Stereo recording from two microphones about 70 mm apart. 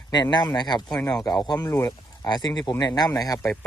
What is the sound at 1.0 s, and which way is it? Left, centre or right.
Speech, left.